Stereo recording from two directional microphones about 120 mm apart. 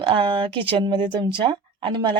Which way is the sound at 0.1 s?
45° right (ahead or behind).